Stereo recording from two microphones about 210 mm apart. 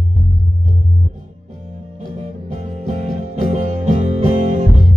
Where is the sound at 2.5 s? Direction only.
30° right (ahead or behind).